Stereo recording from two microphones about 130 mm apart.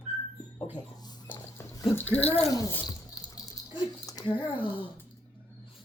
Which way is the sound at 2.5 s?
25° left (ahead or behind).